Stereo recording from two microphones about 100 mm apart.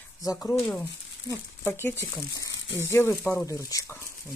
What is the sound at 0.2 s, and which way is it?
Speech, 35° left (ahead or behind).